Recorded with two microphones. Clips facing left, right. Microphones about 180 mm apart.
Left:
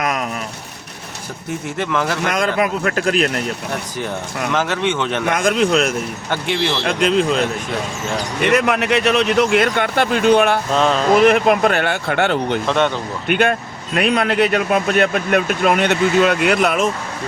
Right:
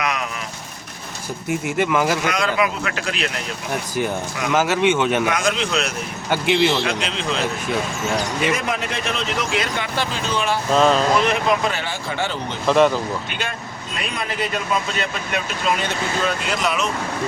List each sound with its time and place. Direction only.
0.0 s a sound: 45° left (ahead or behind)
1.5 s speech: 10° right (ahead or behind)
2.2 s speech: 50° left (ahead or behind)
4.5 s speech: 10° right (ahead or behind)
5.3 s speech: 50° left (ahead or behind)
6.3 s speech: 10° right (ahead or behind)
6.8 s speech: 50° left (ahead or behind)
8.5 s speech: 70° left (ahead or behind)
10.7 s a sound: centre (ahead or behind)
11.2 s speech: 55° left (ahead or behind)
12.6 s a sound: centre (ahead or behind)
13.2 s speech: 60° left (ahead or behind)